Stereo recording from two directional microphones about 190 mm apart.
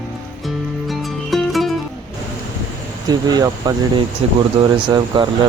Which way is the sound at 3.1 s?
20° right (ahead or behind).